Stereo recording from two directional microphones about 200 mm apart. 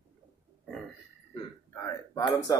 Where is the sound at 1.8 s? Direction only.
15° left (ahead or behind).